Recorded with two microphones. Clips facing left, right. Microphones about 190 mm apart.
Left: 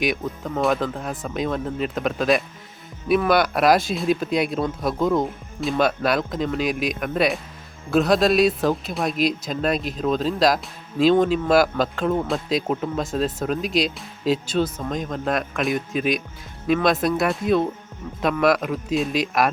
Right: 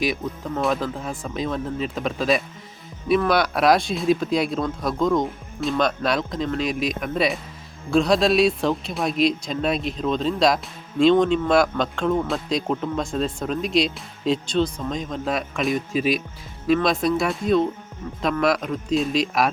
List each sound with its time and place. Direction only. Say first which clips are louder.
0.0 s speech: left 1 dB; centre (ahead or behind)